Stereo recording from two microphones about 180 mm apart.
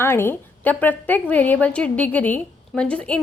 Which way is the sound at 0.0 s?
10° left (ahead or behind).